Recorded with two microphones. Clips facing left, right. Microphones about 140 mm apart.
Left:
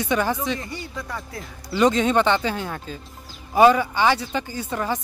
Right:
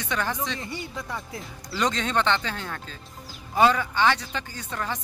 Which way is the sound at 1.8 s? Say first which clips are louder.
Left 7 dB; 10° left (ahead or behind).